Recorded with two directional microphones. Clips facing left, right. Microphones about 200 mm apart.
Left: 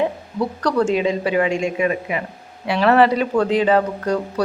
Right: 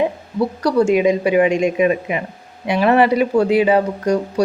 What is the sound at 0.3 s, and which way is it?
Speech, 10° right (ahead or behind).